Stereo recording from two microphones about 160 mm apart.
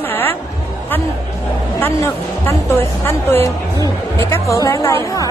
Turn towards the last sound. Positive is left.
turn(degrees=20)  # may be behind; listen again after turning